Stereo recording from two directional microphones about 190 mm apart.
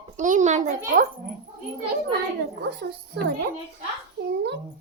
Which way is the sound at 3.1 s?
60° right (ahead or behind).